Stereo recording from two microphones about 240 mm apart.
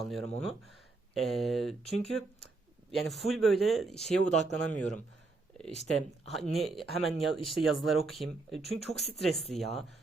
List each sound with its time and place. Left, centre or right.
0.0 s speech: centre
2.9 s speech: centre
4.2 s speech: left
4.6 s speech: centre
5.7 s speech: left
6.3 s speech: centre